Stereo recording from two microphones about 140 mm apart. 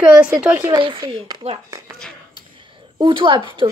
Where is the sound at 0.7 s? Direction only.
35° right (ahead or behind).